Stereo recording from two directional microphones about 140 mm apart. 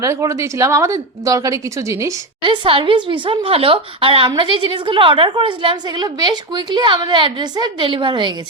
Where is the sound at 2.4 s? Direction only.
40° right (ahead or behind).